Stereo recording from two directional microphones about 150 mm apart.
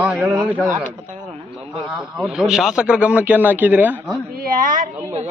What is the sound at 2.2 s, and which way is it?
Speech, centre (ahead or behind).